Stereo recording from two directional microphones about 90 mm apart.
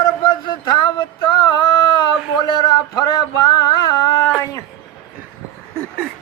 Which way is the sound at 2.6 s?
45° left (ahead or behind).